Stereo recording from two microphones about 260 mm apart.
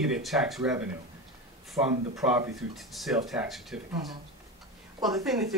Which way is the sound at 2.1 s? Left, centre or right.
Centre.